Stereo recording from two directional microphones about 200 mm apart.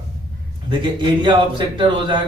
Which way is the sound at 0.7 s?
25° right (ahead or behind).